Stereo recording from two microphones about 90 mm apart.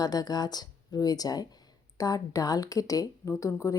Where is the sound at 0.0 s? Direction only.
45° left (ahead or behind).